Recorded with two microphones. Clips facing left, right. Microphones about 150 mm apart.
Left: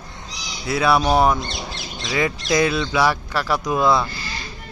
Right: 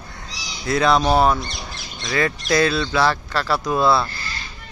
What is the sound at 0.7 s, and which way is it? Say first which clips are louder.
Speech: right 1 dB; 10° left (ahead or behind).